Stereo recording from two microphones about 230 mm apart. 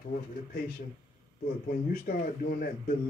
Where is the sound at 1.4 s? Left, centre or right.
Left.